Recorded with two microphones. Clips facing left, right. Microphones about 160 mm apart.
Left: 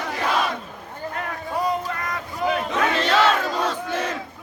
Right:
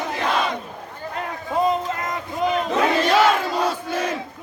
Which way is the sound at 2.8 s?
10° right (ahead or behind).